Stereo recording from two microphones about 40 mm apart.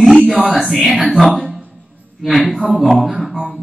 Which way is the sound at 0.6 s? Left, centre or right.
Centre.